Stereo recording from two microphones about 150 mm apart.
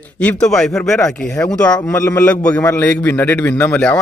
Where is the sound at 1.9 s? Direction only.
15° left (ahead or behind).